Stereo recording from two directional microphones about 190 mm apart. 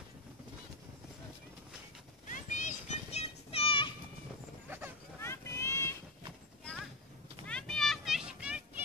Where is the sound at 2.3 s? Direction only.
40° left (ahead or behind).